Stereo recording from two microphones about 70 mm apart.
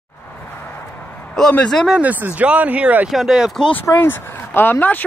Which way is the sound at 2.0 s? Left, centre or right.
Right.